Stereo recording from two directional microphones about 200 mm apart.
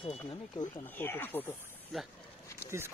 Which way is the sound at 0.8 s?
10° left (ahead or behind).